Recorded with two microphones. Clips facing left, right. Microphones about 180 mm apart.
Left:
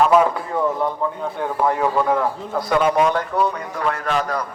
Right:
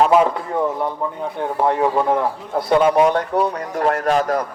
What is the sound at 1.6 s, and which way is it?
A man's voice, 25° right (ahead or behind).